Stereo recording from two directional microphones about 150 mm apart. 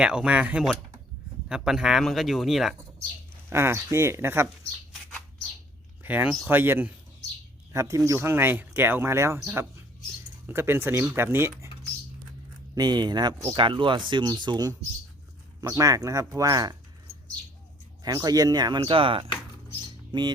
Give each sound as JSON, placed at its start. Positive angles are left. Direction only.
{"t": 0.0, "sound": "speech", "side_deg": -5}
{"t": 3.5, "sound": "speech", "side_deg": -15}
{"t": 6.0, "sound": "speech", "side_deg": -10}
{"t": 10.4, "sound": "speech", "side_deg": -15}
{"t": 12.7, "sound": "speech", "side_deg": -30}
{"t": 18.0, "sound": "speech", "side_deg": -25}